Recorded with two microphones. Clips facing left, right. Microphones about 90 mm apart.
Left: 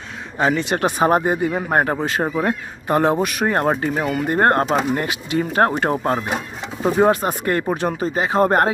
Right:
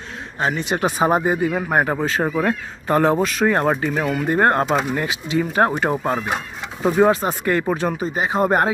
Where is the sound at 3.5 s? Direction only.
35° left (ahead or behind).